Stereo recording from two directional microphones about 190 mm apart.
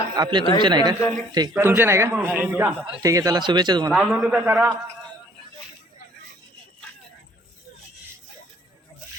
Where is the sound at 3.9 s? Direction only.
Centre (ahead or behind).